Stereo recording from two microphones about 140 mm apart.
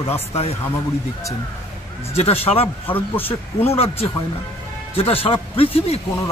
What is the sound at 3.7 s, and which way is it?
A man's voice, 45° left (ahead or behind).